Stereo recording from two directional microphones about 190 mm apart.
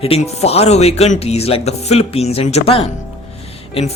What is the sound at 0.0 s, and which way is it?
Speech, 30° left (ahead or behind).